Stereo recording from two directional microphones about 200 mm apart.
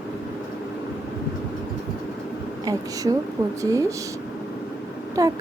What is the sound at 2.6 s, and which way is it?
Speech, 15° right (ahead or behind).